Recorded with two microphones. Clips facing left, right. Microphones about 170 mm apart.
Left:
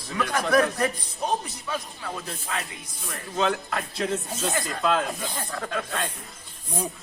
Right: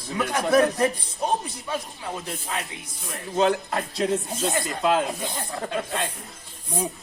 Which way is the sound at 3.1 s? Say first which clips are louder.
Right 4 dB; 35° right (ahead or behind).